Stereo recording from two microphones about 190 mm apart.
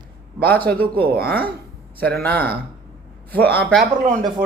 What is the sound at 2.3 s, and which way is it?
Speech, 55° right (ahead or behind).